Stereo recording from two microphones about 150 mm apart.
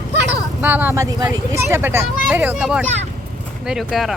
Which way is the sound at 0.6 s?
10° right (ahead or behind).